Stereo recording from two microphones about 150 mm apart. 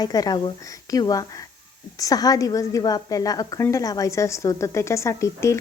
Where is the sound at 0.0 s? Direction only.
25° left (ahead or behind).